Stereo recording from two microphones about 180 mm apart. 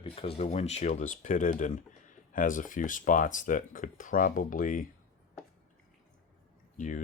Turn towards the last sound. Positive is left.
turn(degrees=45)  # may be behind; listen again after turning